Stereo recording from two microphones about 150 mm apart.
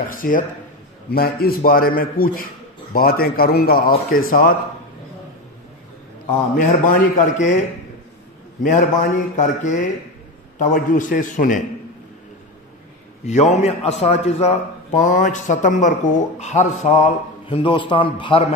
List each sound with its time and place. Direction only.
0.0 s a man's voice: 70° left (ahead or behind)
1.1 s a man's voice: 85° left; by 4.6 s 70° left (ahead or behind)
6.5 s a man's voice: 65° left (ahead or behind)
8.6 s a man's voice: 60° left (ahead or behind)
10.6 s a man's voice: 60° left (ahead or behind)
13.2 s a man's voice: 50° left (ahead or behind)
17.5 s a man's voice: 35° left (ahead or behind)